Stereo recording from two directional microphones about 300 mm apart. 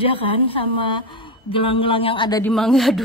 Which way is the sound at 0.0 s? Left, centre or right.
Centre.